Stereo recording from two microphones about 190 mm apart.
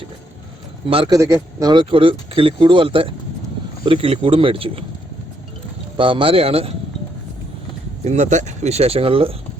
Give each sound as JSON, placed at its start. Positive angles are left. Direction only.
{"t": 0.9, "sound": "speech", "side_deg": -30}
{"t": 1.1, "sound": "speech", "side_deg": -15}
{"t": 6.0, "sound": "speech", "side_deg": -25}
{"t": 8.0, "sound": "speech", "side_deg": -35}